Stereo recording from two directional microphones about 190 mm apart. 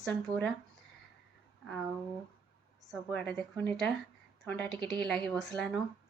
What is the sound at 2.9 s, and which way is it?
A woman's voice, 5° left (ahead or behind).